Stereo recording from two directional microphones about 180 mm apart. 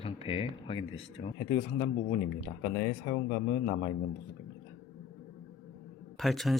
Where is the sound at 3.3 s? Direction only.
55° left (ahead or behind).